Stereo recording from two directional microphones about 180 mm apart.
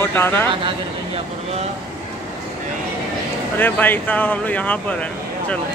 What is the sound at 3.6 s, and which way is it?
Speech, 10° left (ahead or behind).